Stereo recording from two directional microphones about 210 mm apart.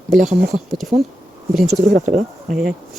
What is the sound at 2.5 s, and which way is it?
Speech, 5° right (ahead or behind).